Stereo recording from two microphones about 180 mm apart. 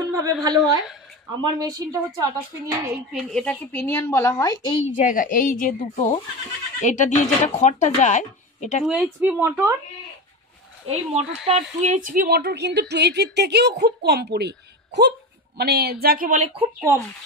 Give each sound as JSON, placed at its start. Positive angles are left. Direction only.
{"t": 0.1, "sound": "a woman's voice", "side_deg": -20}
{"t": 3.1, "sound": "a woman's voice", "side_deg": 0}
{"t": 4.9, "sound": "a woman's voice", "side_deg": 45}
{"t": 8.8, "sound": "speech", "side_deg": -5}
{"t": 10.9, "sound": "a woman's voice", "side_deg": -35}